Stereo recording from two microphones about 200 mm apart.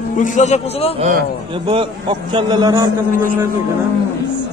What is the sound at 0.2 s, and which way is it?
Speech, 35° left (ahead or behind).